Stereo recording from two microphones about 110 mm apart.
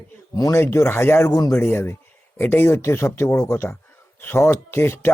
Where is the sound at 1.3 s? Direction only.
30° left (ahead or behind).